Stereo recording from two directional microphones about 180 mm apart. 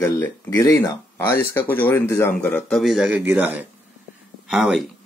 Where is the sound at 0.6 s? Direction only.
15° left (ahead or behind).